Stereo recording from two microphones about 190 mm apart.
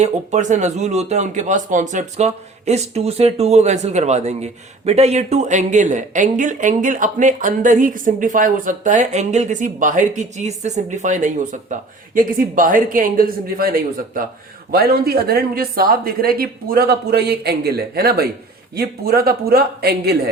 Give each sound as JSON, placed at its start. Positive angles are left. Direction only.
{"t": 0.0, "sound": "speech", "side_deg": -40}